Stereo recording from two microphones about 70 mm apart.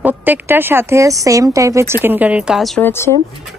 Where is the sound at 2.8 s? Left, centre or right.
Left.